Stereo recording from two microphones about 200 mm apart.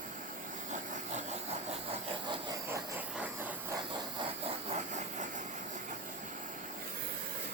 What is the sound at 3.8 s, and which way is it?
Engine, 25° right (ahead or behind).